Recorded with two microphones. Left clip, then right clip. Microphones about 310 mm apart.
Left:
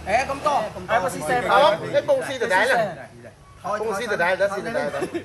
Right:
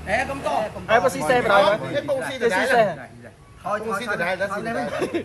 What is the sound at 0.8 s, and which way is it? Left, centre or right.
Speech, right.